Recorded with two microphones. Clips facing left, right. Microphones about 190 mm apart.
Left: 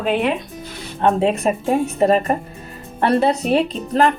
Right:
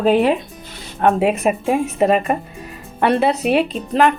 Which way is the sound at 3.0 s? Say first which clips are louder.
Even; 5° right (ahead or behind).